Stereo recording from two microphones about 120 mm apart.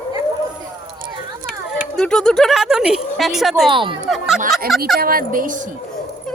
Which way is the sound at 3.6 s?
45° right (ahead or behind).